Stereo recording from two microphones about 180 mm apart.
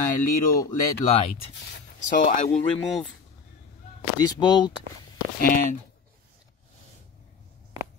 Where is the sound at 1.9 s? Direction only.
45° left (ahead or behind).